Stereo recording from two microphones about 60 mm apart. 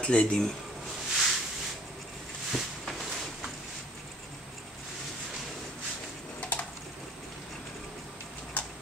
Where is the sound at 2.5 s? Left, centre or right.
Centre.